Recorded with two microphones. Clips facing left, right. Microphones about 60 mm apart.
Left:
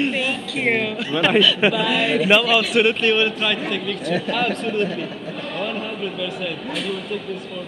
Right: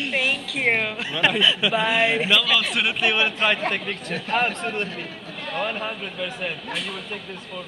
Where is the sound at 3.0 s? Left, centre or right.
Centre.